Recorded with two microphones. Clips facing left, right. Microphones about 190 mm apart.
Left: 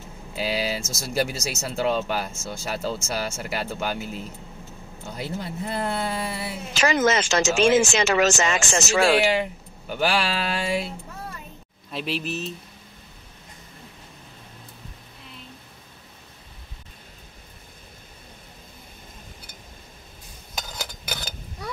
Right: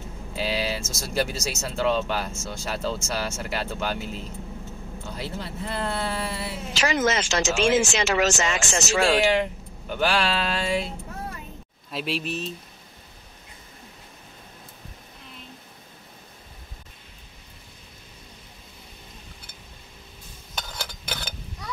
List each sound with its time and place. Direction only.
0.4 s speech: 10° left (ahead or behind)
5.1 s speech: 15° left (ahead or behind)
6.7 s speech: 50° left (ahead or behind)
9.2 s speech: 5° left (ahead or behind)
11.9 s speech: centre (ahead or behind)
20.7 s a sound: centre (ahead or behind)